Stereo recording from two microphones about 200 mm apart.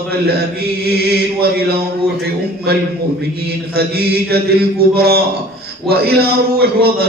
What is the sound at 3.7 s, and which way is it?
Mantra, 50° right (ahead or behind).